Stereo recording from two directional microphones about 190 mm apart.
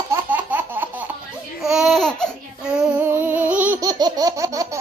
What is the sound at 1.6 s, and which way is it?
Babbling, 5° right (ahead or behind).